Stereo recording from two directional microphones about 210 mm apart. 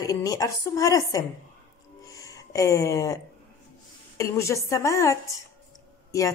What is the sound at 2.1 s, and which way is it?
Music, 15° left (ahead or behind).